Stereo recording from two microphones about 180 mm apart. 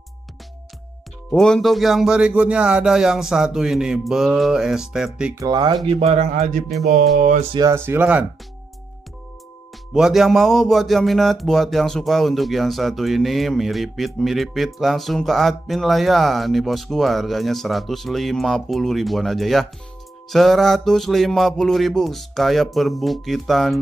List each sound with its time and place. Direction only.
1.3 s speech: 5° left (ahead or behind)
5.4 s speech: 20° right (ahead or behind)
5.9 s a man's voice: 35° right (ahead or behind)
6.3 s music: 45° right (ahead or behind)
7.5 s speech: 15° right (ahead or behind)
9.9 s speech: centre (ahead or behind)